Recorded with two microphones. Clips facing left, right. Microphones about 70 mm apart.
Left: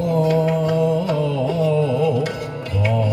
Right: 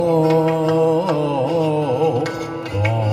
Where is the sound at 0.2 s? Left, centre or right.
Right.